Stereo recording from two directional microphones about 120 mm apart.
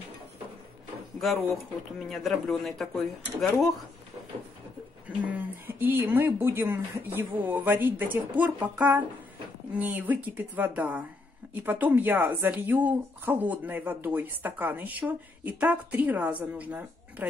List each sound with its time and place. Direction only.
2.0 s speech: centre (ahead or behind)
5.2 s speech: 15° right (ahead or behind)